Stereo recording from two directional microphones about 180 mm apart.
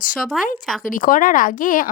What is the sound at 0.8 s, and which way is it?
A woman's voice, 50° left (ahead or behind).